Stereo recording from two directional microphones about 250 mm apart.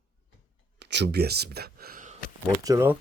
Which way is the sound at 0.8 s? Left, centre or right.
Right.